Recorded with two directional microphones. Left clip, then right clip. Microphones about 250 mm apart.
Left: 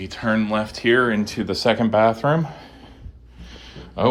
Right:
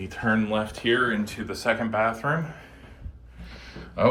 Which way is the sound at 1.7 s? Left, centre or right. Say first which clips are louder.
Left 6 dB; left.